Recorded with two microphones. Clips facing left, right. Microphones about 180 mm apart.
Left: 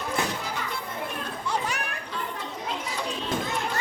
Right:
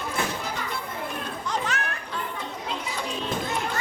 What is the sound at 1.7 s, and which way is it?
Children playing, 15° left (ahead or behind).